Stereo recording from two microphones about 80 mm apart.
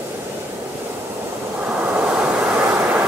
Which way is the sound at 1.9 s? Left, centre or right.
Centre.